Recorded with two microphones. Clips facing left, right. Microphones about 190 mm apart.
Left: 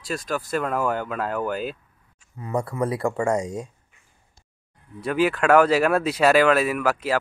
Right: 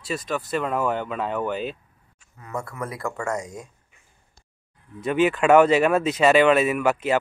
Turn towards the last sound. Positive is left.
turn(degrees=-5)  # may be behind; listen again after turning